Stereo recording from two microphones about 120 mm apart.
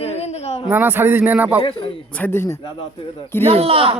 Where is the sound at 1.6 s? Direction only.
50° left (ahead or behind).